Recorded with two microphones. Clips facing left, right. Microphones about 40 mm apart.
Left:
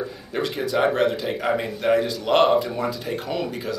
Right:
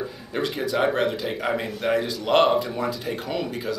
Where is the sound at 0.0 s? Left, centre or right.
Centre.